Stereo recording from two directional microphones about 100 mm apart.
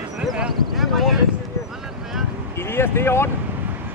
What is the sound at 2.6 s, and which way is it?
Speech, 25° left (ahead or behind).